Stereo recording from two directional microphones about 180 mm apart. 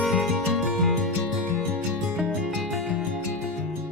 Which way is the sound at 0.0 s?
Centre (ahead or behind).